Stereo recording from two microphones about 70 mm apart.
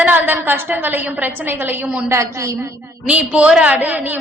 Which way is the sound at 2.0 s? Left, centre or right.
Right.